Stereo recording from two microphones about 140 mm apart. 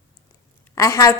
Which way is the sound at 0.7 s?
25° left (ahead or behind).